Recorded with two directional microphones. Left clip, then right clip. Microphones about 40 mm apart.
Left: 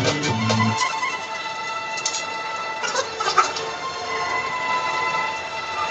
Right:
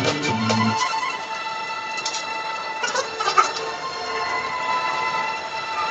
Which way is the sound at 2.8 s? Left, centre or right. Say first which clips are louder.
Right 1 dB; right.